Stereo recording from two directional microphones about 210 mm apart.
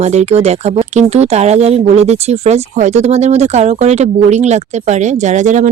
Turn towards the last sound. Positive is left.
turn(degrees=-35)  # may be behind; listen again after turning